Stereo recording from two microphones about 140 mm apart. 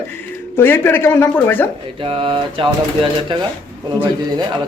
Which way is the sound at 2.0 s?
40° right (ahead or behind).